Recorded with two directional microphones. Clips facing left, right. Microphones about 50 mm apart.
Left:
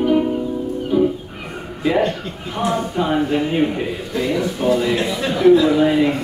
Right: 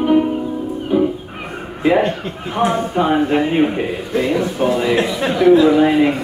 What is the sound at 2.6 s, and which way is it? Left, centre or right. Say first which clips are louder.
A man's voice: right 4 dB; right.